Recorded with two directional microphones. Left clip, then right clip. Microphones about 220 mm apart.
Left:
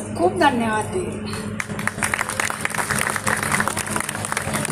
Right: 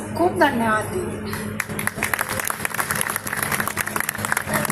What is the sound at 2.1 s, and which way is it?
Applause, 50° right (ahead or behind).